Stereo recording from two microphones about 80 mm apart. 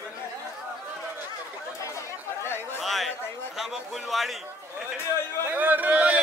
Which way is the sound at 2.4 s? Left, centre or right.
Left.